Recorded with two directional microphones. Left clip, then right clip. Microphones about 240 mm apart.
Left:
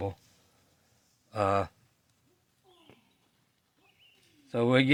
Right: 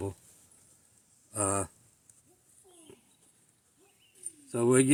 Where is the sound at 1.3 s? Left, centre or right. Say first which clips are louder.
Left 5 dB; left.